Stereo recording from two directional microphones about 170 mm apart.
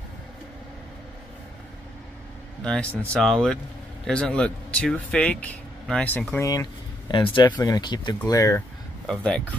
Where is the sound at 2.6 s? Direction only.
5° left (ahead or behind).